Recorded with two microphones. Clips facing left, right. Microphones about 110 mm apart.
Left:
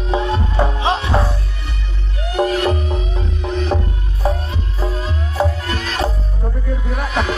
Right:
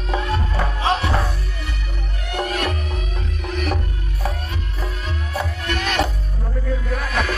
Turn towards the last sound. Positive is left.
turn(degrees=20)  # may be behind; listen again after turning